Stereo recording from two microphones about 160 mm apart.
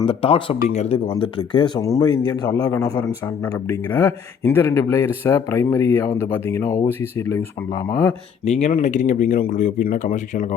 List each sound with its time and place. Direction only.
0.0 s speech: 35° left (ahead or behind); by 8.1 s 20° left (ahead or behind)
8.4 s speech: 40° left (ahead or behind)